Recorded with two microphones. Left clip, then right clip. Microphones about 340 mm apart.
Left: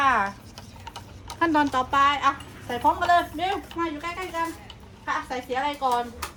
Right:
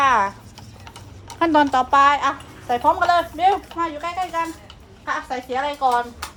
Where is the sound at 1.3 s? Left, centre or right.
Right.